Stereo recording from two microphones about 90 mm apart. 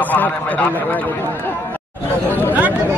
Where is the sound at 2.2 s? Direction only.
20° left (ahead or behind).